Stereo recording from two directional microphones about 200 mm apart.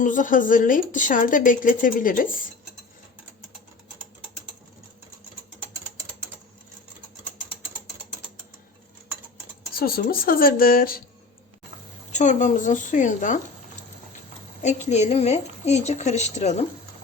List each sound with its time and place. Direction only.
0.0 s a woman's voice: 40° left (ahead or behind)
9.7 s speech: 45° left (ahead or behind)
12.1 s a woman's voice: 35° left (ahead or behind)
14.6 s a woman's voice: 35° left (ahead or behind)